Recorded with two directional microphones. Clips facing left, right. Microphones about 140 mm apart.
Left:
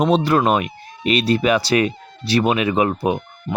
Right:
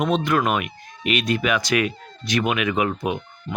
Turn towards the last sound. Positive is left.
turn(degrees=35)  # may be behind; listen again after turning